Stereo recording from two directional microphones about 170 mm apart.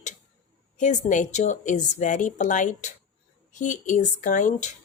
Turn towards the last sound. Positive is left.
turn(degrees=50)  # may be behind; listen again after turning